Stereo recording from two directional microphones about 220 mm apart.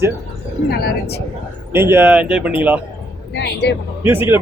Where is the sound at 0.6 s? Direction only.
45° left (ahead or behind).